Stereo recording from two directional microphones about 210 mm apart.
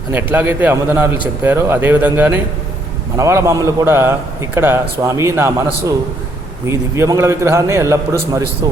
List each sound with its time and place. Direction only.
0.1 s a man's voice: 10° right (ahead or behind)